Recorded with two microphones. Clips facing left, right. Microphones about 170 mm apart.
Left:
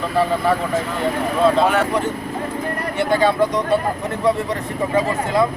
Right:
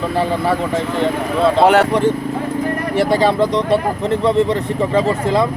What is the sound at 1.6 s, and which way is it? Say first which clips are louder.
Speech: right 6 dB; 75° right (ahead or behind).